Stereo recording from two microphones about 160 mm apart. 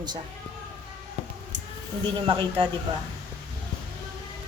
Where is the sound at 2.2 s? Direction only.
30° right (ahead or behind).